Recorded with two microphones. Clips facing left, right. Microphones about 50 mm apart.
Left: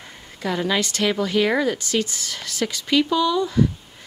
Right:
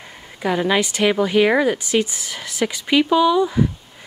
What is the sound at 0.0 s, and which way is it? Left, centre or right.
A woman's voice, centre.